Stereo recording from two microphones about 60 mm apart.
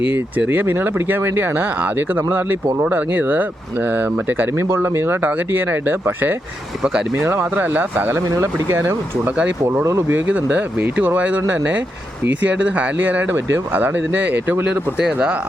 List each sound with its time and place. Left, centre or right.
0.0 s speech: right
4.5 s speech: right
5.2 s speech: right
6.8 s speech: centre
8.1 s speech: right
10.1 s speech: right
15.0 s speech: centre